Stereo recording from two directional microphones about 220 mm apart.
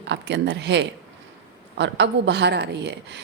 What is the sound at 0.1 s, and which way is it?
Speech, 50° right (ahead or behind).